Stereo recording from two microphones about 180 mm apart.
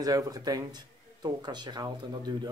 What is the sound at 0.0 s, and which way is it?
Speech, 20° right (ahead or behind).